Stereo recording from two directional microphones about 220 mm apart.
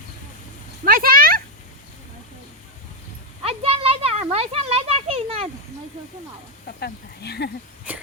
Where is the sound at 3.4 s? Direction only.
25° right (ahead or behind).